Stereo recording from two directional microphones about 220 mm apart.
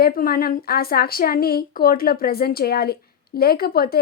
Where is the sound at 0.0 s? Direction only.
40° left (ahead or behind).